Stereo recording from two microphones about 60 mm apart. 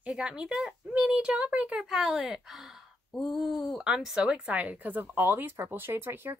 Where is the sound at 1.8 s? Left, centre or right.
Centre.